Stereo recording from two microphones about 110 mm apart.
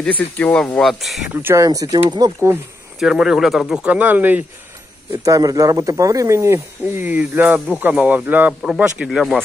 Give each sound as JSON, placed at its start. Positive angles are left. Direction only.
{"t": 0.0, "sound": "speech", "side_deg": 15}
{"t": 1.3, "sound": "speech", "side_deg": -20}
{"t": 1.6, "sound": "speech", "side_deg": -35}
{"t": 3.0, "sound": "speech", "side_deg": -5}
{"t": 5.2, "sound": "speech", "side_deg": -30}